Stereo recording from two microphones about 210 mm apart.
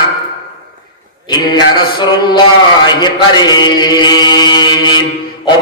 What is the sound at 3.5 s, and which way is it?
Mantra, 20° left (ahead or behind).